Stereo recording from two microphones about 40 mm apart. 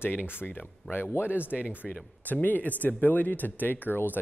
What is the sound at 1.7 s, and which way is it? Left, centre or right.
Speech, left.